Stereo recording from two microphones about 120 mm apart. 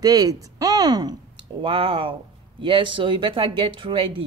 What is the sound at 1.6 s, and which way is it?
A woman's voice, 50° right (ahead or behind).